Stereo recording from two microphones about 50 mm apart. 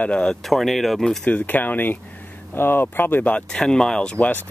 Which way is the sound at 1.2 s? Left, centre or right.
Left.